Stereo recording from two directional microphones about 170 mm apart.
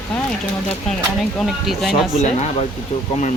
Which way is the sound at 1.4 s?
Centre (ahead or behind).